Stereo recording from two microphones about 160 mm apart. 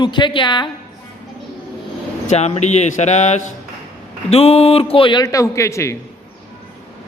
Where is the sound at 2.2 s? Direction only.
40° left (ahead or behind); by 5.9 s 20° left (ahead or behind).